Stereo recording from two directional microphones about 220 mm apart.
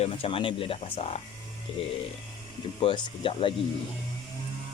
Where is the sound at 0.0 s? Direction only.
25° left (ahead or behind).